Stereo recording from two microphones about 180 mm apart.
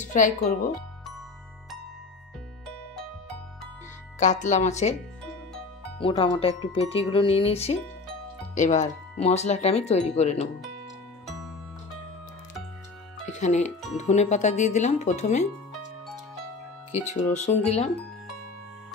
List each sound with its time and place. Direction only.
0.0 s speech: 45° left (ahead or behind)
4.2 s speech: 45° left (ahead or behind)
5.9 s speech: 30° left (ahead or behind)
13.2 s music: 40° left (ahead or behind)
13.9 s speech: 40° left (ahead or behind)
16.9 s speech: 40° left (ahead or behind)